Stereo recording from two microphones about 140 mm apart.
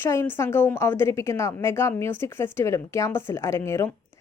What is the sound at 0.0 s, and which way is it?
A woman's voice, 15° left (ahead or behind).